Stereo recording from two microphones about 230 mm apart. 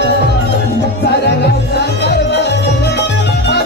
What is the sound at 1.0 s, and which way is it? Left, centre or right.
Music, left.